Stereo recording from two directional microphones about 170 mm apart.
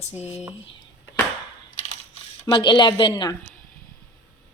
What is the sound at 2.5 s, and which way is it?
Speech, 25° left (ahead or behind).